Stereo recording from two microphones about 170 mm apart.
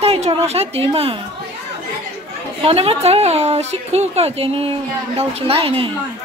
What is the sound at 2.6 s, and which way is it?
A woman's voice, 35° right (ahead or behind).